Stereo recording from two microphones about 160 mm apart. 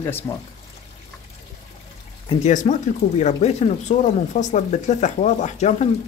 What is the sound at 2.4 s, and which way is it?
Speech, 50° left (ahead or behind).